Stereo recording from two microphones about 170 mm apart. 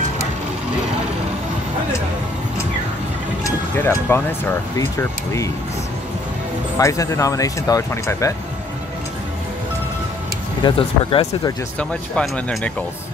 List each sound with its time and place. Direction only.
3.4 s speech: 15° left (ahead or behind)
6.8 s speech: 20° left (ahead or behind)
10.6 s speech: 30° left (ahead or behind)
11.9 s speech: 5° left (ahead or behind)